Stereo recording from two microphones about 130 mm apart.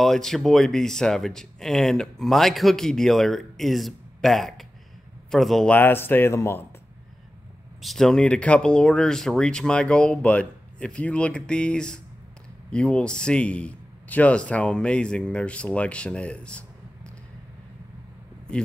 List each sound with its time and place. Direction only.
0.0 s speech: 5° left (ahead or behind)
5.8 s a man's voice: 15° left (ahead or behind)
7.8 s a man's voice: 5° left (ahead or behind)